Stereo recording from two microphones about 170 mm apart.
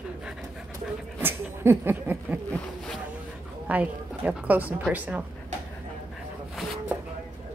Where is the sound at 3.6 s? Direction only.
10° right (ahead or behind).